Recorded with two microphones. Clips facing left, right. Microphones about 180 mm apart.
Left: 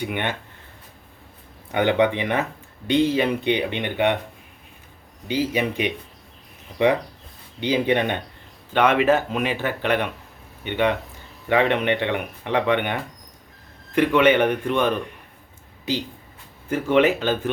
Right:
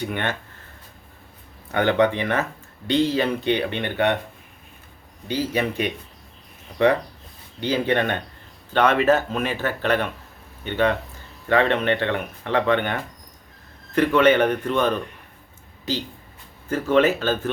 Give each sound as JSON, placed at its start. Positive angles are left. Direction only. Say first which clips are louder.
{"t": 0.0, "sound": "speech", "louder": "even", "side_deg": 15}
{"t": 1.7, "sound": "speech", "louder": "even", "side_deg": 15}
{"t": 5.3, "sound": "speech", "louder": "left 1 dB", "side_deg": 15}
{"t": 7.6, "sound": "speech", "louder": "left 1 dB", "side_deg": 15}
{"t": 16.6, "sound": "speech", "louder": "even", "side_deg": 15}